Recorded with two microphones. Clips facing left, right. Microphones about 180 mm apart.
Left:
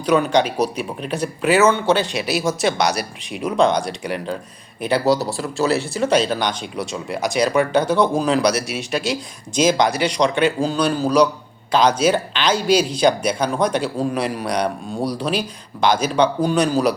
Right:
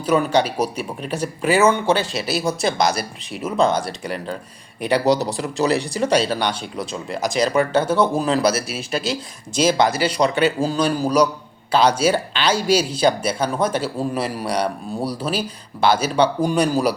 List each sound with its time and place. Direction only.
0.0 s speech: 5° right (ahead or behind)
4.9 s speech: 20° right (ahead or behind)
6.9 s speech: centre (ahead or behind)